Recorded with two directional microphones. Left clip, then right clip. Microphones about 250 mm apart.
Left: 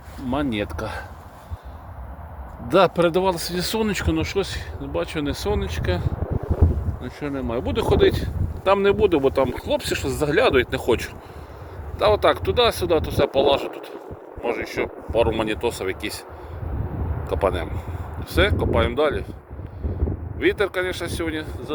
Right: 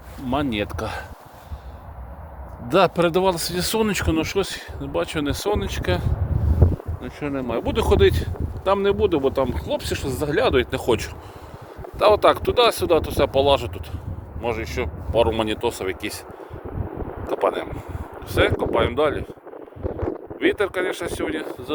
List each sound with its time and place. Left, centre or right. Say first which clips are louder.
0.3 s speech: right 1 dB; centre
2.6 s speech: left 1 dB; centre
8.6 s speech: left 2 dB; centre
17.2 s speech: right 1 dB; centre
20.4 s speech: even; centre